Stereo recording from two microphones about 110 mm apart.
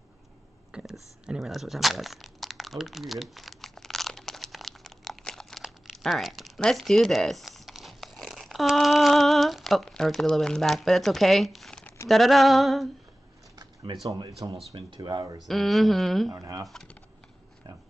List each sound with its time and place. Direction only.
0.7 s a sound: 10° right (ahead or behind)
1.2 s crumpling: 5° right (ahead or behind)
12.1 s female singing: centre (ahead or behind)
13.9 s speech: 45° right (ahead or behind)
15.4 s female singing: centre (ahead or behind)
16.3 s speech: 30° right (ahead or behind)
16.6 s female singing: 5° left (ahead or behind)